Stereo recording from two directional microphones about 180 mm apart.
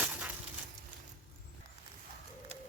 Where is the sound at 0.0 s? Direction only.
10° right (ahead or behind).